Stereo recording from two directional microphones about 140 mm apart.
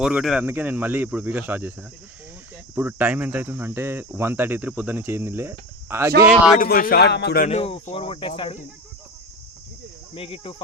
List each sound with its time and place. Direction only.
0.0 s speech: 5° right (ahead or behind)
0.4 s cricket: 15° right (ahead or behind)
2.7 s cricket: 15° right (ahead or behind)
6.6 s a man's voice: 90° left
7.5 s speech: 40° left (ahead or behind)
10.2 s speech: 40° left (ahead or behind)